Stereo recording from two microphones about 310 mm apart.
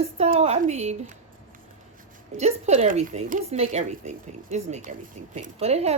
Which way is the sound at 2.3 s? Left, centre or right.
Right.